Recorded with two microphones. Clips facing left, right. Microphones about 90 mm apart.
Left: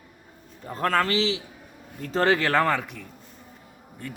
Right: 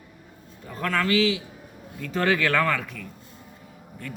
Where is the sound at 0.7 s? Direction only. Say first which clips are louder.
Left 1 dB; 40° left (ahead or behind).